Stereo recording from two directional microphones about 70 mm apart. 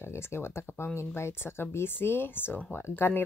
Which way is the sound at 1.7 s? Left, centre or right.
Left.